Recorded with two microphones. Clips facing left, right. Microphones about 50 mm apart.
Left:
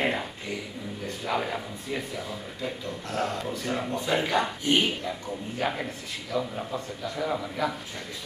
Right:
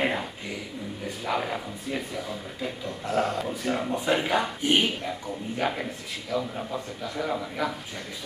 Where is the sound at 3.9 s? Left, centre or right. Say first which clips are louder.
Even; centre.